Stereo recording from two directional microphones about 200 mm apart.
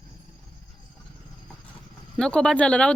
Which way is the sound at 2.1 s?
5° left (ahead or behind).